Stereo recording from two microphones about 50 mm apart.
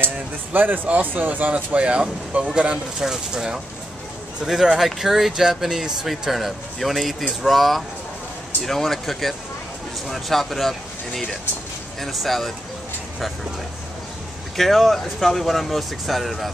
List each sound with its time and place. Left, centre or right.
0.0 s speech: right
1.5 s speech: right; by 12.5 s centre
14.6 s speech: centre